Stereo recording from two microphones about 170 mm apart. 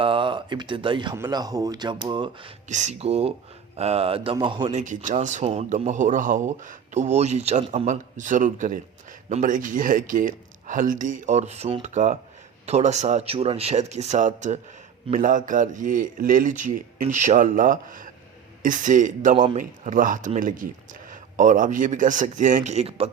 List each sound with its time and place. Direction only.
0.0 s speech: 30° right (ahead or behind)
2.6 s a man's voice: 45° right (ahead or behind); by 4.7 s 30° right (ahead or behind)
4.7 s a man's voice: 45° right (ahead or behind)